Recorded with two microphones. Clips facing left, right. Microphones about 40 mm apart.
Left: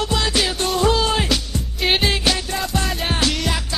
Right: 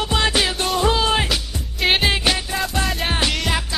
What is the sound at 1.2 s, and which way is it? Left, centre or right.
Music, centre.